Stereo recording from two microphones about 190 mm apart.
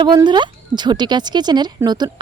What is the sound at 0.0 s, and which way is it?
Speech, 20° right (ahead or behind).